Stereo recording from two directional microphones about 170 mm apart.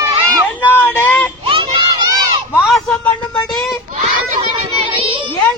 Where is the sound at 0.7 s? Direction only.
10° left (ahead or behind).